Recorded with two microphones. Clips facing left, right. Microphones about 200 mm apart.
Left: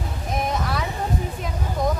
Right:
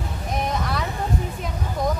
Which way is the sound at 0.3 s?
Centre (ahead or behind).